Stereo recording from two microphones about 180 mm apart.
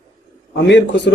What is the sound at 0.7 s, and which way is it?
Speech, 80° left.